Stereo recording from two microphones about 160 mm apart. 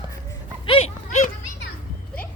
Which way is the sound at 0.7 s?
40° left (ahead or behind).